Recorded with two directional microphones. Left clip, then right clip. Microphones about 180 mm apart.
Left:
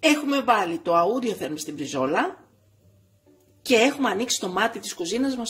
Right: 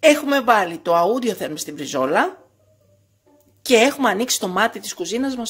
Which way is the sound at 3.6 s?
30° right (ahead or behind).